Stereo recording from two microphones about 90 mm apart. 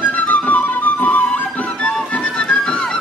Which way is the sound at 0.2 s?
20° left (ahead or behind).